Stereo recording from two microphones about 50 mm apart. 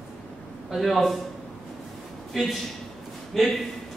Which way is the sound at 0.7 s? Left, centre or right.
Centre.